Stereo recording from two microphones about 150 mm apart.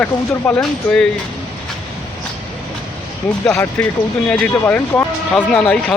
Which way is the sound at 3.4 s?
10° left (ahead or behind).